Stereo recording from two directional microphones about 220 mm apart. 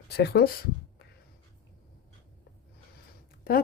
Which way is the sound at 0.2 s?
45° left (ahead or behind).